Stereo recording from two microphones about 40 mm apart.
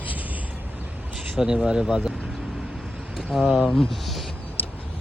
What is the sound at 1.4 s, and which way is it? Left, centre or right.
Speech, centre.